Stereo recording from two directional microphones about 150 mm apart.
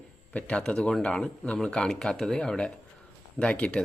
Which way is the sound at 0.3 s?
5° left (ahead or behind).